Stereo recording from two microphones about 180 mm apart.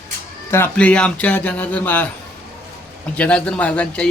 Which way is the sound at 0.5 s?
10° left (ahead or behind).